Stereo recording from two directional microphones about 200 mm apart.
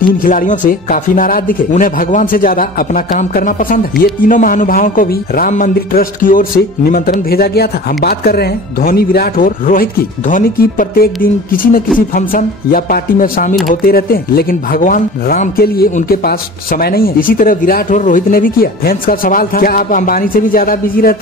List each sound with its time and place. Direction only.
0.2 s speech: 40° left (ahead or behind)
12.1 s speech: 45° left (ahead or behind)